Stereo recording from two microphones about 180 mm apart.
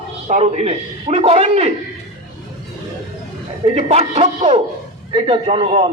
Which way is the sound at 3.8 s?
35° right (ahead or behind).